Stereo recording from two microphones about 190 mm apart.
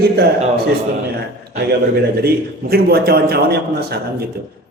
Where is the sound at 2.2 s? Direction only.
55° right (ahead or behind).